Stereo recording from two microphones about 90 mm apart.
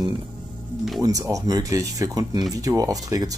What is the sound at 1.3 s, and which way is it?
Speech, 40° right (ahead or behind).